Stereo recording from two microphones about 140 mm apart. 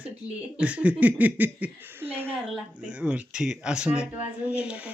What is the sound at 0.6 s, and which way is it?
Speech, 10° right (ahead or behind).